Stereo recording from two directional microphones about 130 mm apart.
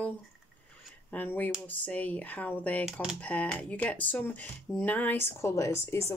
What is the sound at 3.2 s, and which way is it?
Speech, 10° left (ahead or behind).